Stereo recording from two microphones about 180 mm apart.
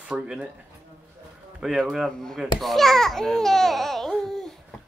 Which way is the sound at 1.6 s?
Centre (ahead or behind).